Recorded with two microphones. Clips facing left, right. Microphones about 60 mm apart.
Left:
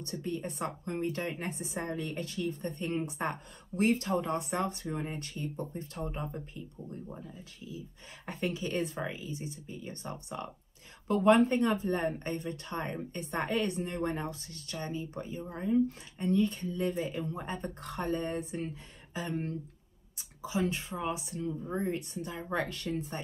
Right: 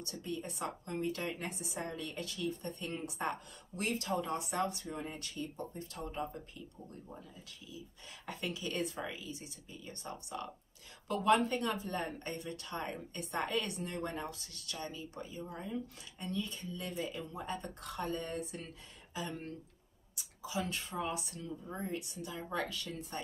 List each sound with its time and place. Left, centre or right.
0.0 s a woman's voice: left
21.7 s a woman's voice: left